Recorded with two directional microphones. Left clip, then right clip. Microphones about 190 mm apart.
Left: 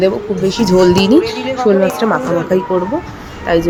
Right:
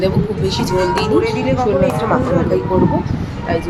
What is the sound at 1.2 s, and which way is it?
Speech, 25° left (ahead or behind).